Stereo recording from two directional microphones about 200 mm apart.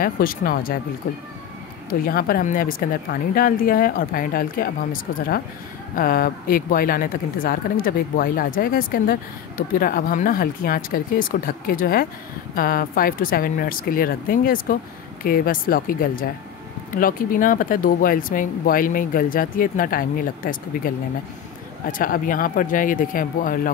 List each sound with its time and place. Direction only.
0.0 s speech: 45° left (ahead or behind)
21.9 s speech: 45° left (ahead or behind)